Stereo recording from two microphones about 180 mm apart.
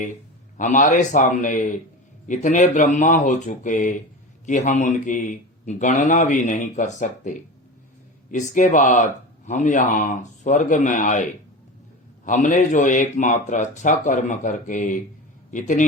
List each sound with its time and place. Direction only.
0.5 s a man's voice: 45° left (ahead or behind)